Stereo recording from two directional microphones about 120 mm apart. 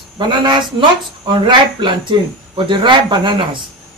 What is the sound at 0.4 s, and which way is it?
Speech, 40° right (ahead or behind).